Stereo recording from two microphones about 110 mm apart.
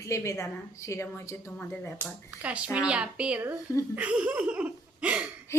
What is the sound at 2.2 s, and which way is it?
Speech, 10° right (ahead or behind).